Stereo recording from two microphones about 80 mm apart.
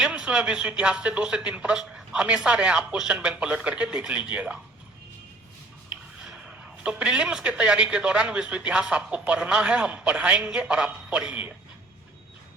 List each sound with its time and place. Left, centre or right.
0.0 s speech: centre
5.9 s speech: centre